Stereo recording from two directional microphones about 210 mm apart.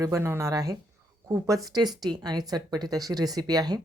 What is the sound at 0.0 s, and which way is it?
Speech, 15° right (ahead or behind).